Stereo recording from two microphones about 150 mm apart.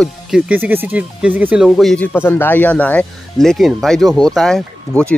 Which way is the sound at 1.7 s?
Centre (ahead or behind).